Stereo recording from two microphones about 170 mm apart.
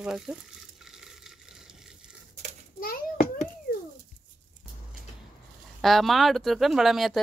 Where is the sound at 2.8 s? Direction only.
60° left (ahead or behind).